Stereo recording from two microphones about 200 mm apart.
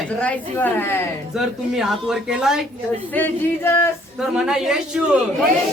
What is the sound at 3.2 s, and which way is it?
Speech, 10° left (ahead or behind).